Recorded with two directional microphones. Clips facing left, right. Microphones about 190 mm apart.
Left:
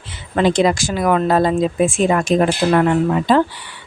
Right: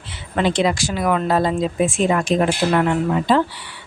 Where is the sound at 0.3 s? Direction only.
45° left (ahead or behind).